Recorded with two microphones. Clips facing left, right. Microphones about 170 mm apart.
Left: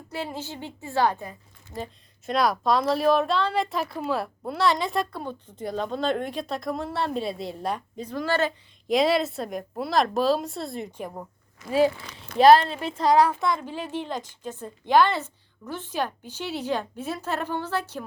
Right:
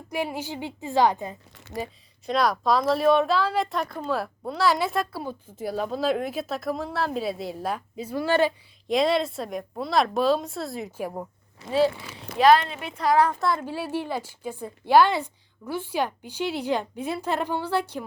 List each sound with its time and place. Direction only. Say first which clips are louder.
0.1 s a woman's voice: right 4 dB; 10° right (ahead or behind)
1.5 s speech: right 2 dB; 75° right (ahead or behind)
1.8 s a woman's voice: right 1 dB; centre (ahead or behind)
8.9 s a woman's voice: left 1 dB; centre (ahead or behind)
11.6 s speech: left 1 dB; 30° right (ahead or behind)
12.4 s a woman's voice: left 3 dB; 35° left (ahead or behind)
13.4 s a woman's voice: right 1 dB; 5° right (ahead or behind)